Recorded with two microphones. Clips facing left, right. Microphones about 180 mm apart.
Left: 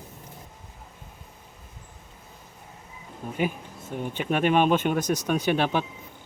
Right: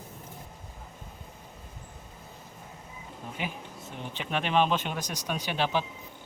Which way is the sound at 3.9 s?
50° left (ahead or behind).